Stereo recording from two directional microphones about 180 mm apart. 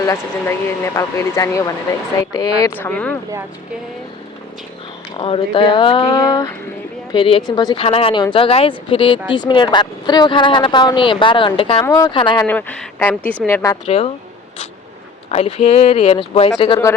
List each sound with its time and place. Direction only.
0.9 s speech: 15° left (ahead or behind)
5.1 s speech: 30° left (ahead or behind)
12.5 s speech: 10° left (ahead or behind)
13.8 s speech: 35° left (ahead or behind)
15.3 s speech: 35° left (ahead or behind)